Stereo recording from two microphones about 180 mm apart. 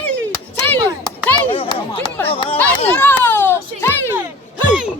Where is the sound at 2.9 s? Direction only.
10° left (ahead or behind).